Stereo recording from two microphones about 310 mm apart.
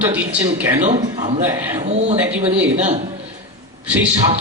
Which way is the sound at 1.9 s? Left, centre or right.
Right.